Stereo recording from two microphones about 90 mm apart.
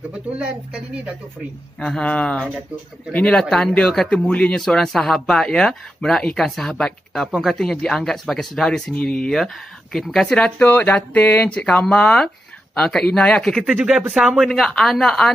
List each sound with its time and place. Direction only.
1.8 s speech: 10° left (ahead or behind)
10.4 s speech: 20° left (ahead or behind); by 15.3 s 5° left (ahead or behind)